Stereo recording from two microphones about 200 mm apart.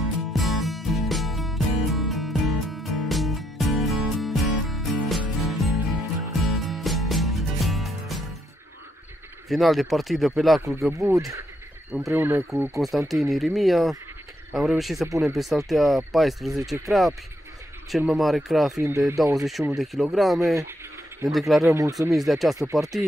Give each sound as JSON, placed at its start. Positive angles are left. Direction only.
{"t": 0.3, "sound": "music", "side_deg": 0}
{"t": 9.5, "sound": "speech", "side_deg": 0}
{"t": 10.9, "sound": "speech", "side_deg": -15}
{"t": 12.7, "sound": "speech", "side_deg": 0}
{"t": 17.9, "sound": "speech", "side_deg": 0}
{"t": 18.8, "sound": "speech", "side_deg": -10}
{"t": 19.3, "sound": "speech", "side_deg": 0}
{"t": 21.6, "sound": "speech", "side_deg": -15}
{"t": 22.1, "sound": "speech", "side_deg": 0}